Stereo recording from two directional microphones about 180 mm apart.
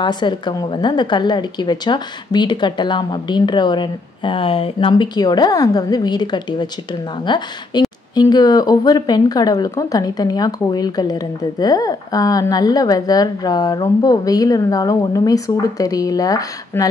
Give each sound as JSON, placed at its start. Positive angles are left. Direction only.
{"t": 0.0, "sound": "speech", "side_deg": 25}